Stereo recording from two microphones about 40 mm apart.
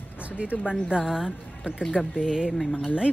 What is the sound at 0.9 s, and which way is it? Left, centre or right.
A woman's voice, right.